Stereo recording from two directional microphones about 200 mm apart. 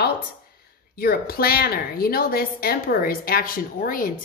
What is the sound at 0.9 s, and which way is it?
A woman's voice, 50° left (ahead or behind).